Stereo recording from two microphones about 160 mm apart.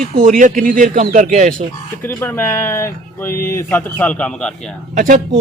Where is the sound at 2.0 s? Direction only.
15° left (ahead or behind).